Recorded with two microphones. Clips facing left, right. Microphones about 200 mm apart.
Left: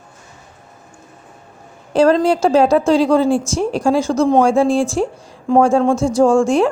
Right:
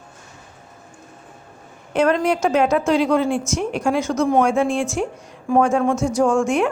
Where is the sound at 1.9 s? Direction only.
30° left (ahead or behind).